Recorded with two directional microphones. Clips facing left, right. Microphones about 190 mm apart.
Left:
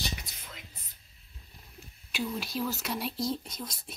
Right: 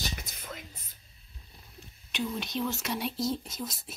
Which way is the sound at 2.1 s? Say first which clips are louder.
Right 1 dB; 5° left (ahead or behind).